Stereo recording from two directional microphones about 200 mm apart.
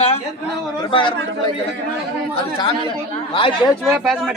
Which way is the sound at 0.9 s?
25° left (ahead or behind).